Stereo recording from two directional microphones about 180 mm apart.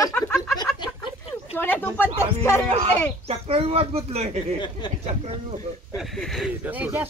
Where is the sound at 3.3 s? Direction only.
35° right (ahead or behind).